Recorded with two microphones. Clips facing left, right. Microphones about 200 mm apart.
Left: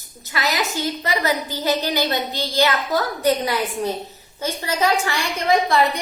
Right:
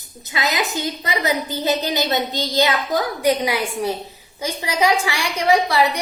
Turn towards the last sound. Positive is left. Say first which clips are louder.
# right 1 dB
turn(degrees=-10)  # may be behind; listen again after turning